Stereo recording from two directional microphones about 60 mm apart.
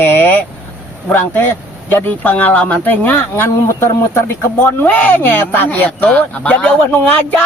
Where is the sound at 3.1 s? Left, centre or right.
Left.